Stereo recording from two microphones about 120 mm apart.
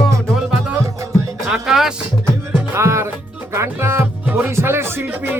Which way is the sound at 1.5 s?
5° right (ahead or behind).